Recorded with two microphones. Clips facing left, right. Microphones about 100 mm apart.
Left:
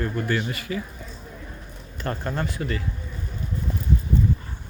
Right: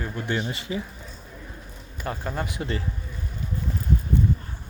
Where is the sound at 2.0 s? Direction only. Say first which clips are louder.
Left 2 dB; 10° right (ahead or behind).